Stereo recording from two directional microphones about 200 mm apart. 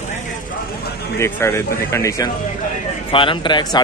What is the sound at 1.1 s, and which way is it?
Speech, 15° left (ahead or behind).